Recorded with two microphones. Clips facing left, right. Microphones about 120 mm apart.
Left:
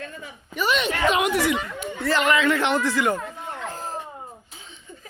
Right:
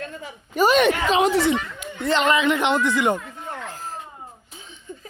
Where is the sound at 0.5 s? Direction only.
40° right (ahead or behind).